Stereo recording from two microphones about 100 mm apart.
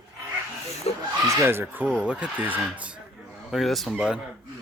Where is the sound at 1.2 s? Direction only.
30° right (ahead or behind); by 2.9 s 15° right (ahead or behind).